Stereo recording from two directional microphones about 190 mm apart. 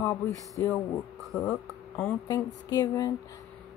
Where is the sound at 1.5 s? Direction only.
15° left (ahead or behind).